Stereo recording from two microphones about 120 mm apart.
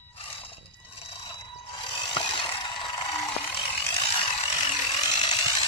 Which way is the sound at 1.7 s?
40° left (ahead or behind).